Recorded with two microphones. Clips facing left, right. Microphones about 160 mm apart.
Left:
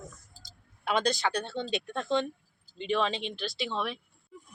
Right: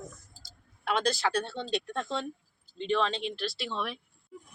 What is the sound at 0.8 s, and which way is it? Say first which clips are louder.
Speech: left 1 dB; centre (ahead or behind).